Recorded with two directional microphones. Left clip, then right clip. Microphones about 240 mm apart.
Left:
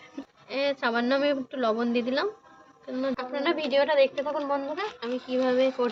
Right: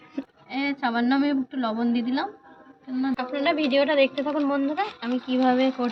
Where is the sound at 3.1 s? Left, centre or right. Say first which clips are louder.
Right 5 dB; centre.